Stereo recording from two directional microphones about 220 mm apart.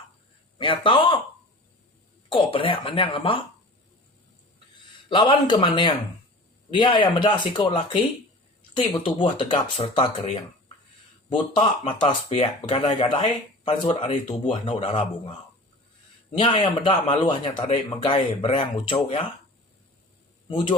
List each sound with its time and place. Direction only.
0.6 s speech: 25° left (ahead or behind)
2.3 s speech: 25° left (ahead or behind)
5.0 s speech: 20° left (ahead or behind)
11.5 s speech: 20° left (ahead or behind)
16.4 s speech: 25° left (ahead or behind)
20.5 s speech: 20° left (ahead or behind)